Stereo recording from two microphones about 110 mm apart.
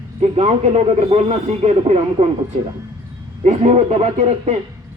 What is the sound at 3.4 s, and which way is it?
Speech, 80° right.